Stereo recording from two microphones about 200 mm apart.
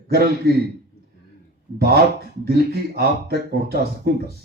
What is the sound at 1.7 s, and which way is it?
A man's voice, 50° right (ahead or behind).